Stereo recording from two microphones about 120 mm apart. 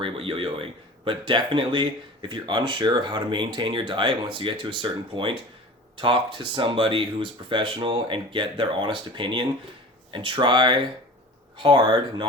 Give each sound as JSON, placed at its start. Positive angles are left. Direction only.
{"t": 0.0, "sound": "speech", "side_deg": -50}